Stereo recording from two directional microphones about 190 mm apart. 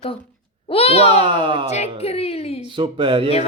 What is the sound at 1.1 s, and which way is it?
Speech, 25° right (ahead or behind).